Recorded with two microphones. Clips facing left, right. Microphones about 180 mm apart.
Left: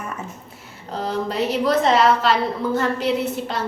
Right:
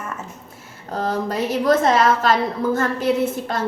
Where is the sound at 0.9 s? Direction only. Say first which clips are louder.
Right 1 dB; 45° right (ahead or behind).